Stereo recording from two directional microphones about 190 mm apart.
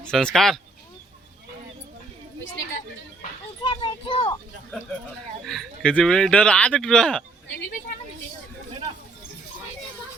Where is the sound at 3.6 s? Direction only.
25° left (ahead or behind).